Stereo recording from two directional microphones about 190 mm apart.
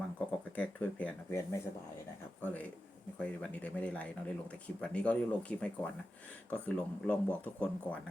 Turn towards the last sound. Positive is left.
turn(degrees=5)  # may be behind; listen again after turning